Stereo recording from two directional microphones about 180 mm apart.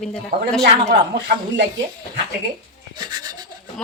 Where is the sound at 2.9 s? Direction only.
25° right (ahead or behind).